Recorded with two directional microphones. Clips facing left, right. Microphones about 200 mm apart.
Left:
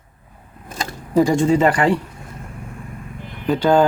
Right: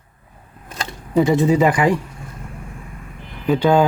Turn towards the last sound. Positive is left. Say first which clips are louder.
# even
turn(degrees=-5)  # may be behind; listen again after turning